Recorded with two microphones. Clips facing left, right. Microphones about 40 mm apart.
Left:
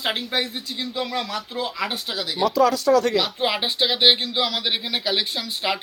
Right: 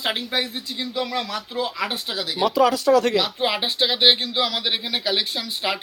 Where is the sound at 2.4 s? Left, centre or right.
Centre.